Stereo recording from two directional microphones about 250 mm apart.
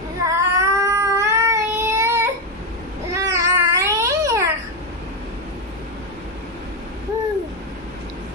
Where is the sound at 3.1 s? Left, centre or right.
Centre.